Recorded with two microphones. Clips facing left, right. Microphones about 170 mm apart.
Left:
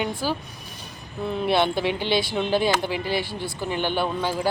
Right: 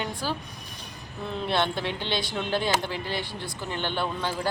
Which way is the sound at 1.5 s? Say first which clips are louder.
Left 5 dB; 10° left (ahead or behind).